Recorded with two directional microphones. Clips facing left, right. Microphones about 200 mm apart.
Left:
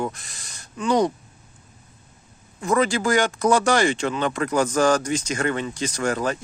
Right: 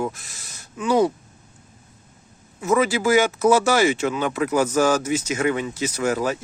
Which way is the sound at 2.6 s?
5° right (ahead or behind).